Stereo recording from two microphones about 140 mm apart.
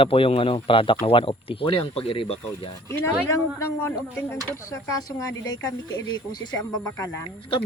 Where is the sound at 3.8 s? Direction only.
15° left (ahead or behind).